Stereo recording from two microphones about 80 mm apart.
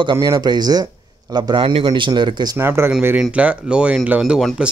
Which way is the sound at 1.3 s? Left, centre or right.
Right.